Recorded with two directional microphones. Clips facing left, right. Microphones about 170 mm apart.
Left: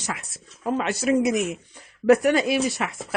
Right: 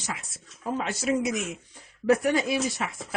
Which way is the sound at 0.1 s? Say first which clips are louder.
Left 3 dB; 70° left (ahead or behind).